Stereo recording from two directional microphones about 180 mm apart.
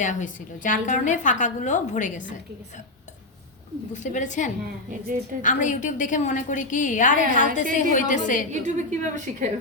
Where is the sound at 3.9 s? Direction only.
45° left (ahead or behind).